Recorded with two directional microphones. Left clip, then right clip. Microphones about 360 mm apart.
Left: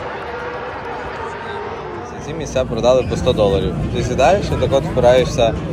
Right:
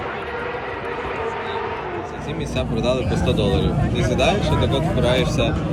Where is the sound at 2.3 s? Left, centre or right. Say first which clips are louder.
Left 8 dB; centre.